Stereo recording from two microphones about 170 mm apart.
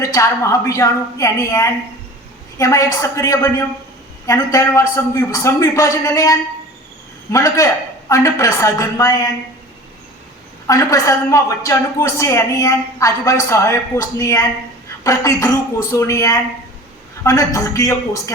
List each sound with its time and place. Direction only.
0.0 s a woman's voice: 20° left (ahead or behind)
7.3 s a woman's voice: 20° left (ahead or behind)
10.7 s a woman's voice: 20° left (ahead or behind)